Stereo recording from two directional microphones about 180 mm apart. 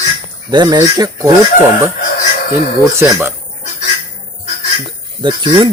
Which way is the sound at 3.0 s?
15° right (ahead or behind).